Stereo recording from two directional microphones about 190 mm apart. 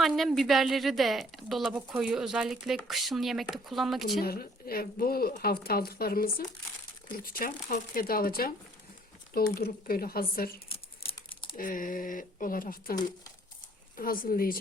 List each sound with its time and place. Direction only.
0.0 s speech: centre (ahead or behind)
4.2 s speech: 50° left (ahead or behind)
10.7 s crumpling: 30° left (ahead or behind)
11.5 s speech: 45° left (ahead or behind)